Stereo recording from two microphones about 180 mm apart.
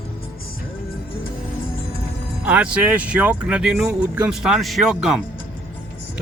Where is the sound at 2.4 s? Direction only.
5° right (ahead or behind).